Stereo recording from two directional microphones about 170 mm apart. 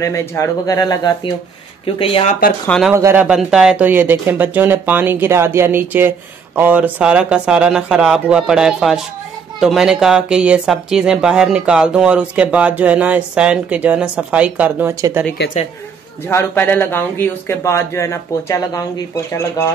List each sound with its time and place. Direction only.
0.0 s speech: 15° left (ahead or behind)
2.0 s speech: 35° left (ahead or behind)
2.9 s speech: 15° right (ahead or behind)
3.3 s speech: 5° right (ahead or behind)
16.3 s speech: 15° left (ahead or behind)